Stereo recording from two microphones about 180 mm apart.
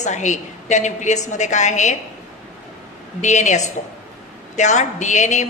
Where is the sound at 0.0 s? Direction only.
40° left (ahead or behind).